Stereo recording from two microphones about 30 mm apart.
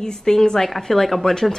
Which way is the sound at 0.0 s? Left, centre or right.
Centre.